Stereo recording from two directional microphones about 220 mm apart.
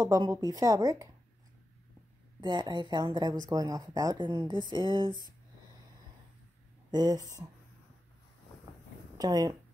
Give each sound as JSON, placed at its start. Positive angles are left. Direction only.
{"t": 0.0, "sound": "speech", "side_deg": -15}
{"t": 2.4, "sound": "speech", "side_deg": -20}
{"t": 6.9, "sound": "speech", "side_deg": -20}
{"t": 9.2, "sound": "speech", "side_deg": -15}